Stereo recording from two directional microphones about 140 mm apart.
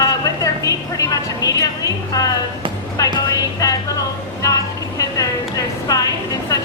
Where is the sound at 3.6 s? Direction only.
25° left (ahead or behind).